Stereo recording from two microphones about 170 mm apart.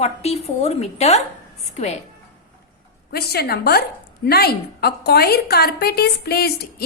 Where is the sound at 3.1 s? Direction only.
70° left (ahead or behind).